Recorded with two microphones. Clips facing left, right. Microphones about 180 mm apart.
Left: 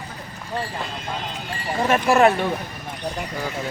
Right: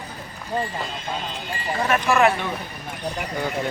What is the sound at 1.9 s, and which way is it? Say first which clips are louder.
Speech: left 3 dB; 35° left (ahead or behind).